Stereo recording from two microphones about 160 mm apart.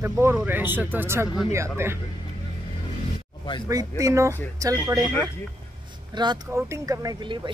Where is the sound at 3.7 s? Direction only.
20° right (ahead or behind).